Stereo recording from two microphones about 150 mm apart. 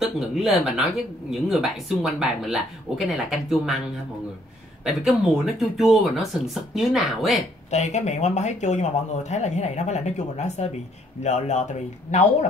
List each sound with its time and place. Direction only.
0.0 s speech: centre (ahead or behind)
4.8 s speech: 5° right (ahead or behind)
7.7 s speech: 50° left (ahead or behind)